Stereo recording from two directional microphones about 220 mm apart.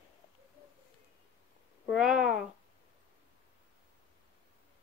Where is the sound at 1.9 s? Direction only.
Centre (ahead or behind).